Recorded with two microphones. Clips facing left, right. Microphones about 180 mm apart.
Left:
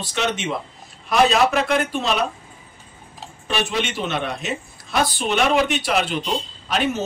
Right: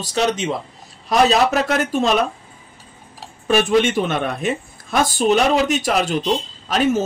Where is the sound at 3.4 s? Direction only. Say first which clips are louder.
Right 8 dB; 50° right (ahead or behind).